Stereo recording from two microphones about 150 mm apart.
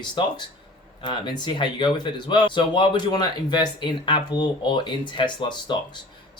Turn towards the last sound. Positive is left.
turn(degrees=30)  # may be behind; listen again after turning